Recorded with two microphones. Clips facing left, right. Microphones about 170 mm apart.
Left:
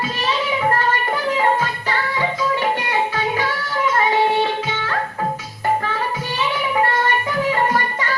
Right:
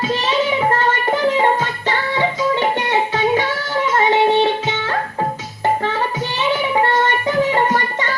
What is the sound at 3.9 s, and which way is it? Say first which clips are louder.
Music: right 4 dB; 25° right (ahead or behind).